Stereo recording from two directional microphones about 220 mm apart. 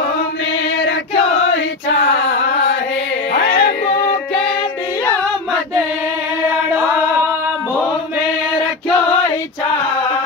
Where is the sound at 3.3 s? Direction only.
55° left (ahead or behind).